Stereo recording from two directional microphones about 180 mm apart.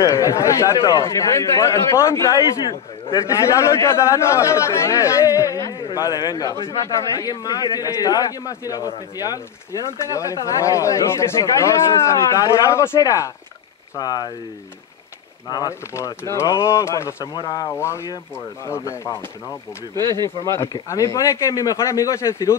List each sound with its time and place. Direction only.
0.0 s speech: 20° left (ahead or behind)
15.4 s speech: 20° left (ahead or behind)
20.0 s speech: 20° right (ahead or behind)
20.4 s speech: 15° left (ahead or behind)